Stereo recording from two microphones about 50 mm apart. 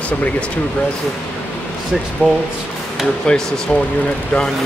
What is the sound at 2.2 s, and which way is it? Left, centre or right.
Speech, left.